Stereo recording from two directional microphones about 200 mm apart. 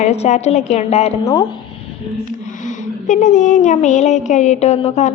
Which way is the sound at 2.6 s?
40° left (ahead or behind).